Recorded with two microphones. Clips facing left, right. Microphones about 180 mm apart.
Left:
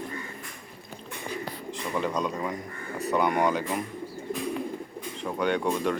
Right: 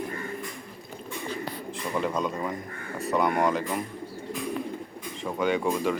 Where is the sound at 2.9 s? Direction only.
Centre (ahead or behind).